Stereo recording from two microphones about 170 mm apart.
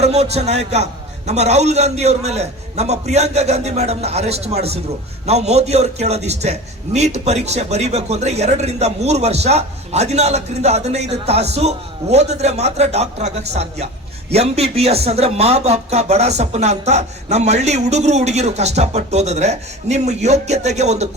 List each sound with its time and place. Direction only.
0.0 s speech: 40° right (ahead or behind)